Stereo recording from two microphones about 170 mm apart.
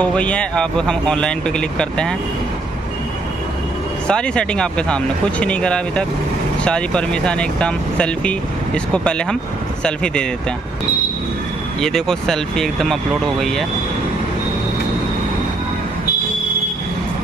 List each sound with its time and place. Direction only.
0.0 s speech: 5° left (ahead or behind)
4.1 s speech: 5° left (ahead or behind)
11.8 s speech: 5° left (ahead or behind)